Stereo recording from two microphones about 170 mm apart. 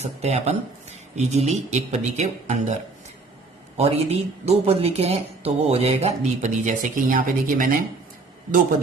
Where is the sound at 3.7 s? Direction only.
35° right (ahead or behind); by 7.7 s 50° right (ahead or behind).